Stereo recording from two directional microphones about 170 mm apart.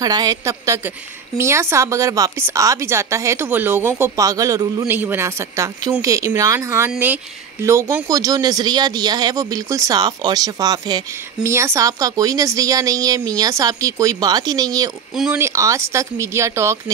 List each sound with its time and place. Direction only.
0.0 s a woman's voice: 25° right (ahead or behind)